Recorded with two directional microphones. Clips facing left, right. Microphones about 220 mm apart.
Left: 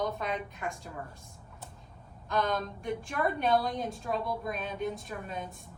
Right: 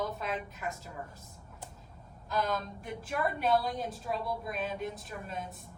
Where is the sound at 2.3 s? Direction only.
5° right (ahead or behind).